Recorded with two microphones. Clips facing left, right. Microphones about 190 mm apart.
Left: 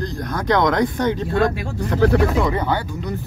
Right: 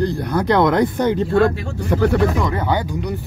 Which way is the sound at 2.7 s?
15° right (ahead or behind).